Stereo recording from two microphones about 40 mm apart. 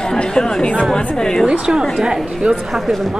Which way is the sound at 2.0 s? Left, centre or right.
Centre.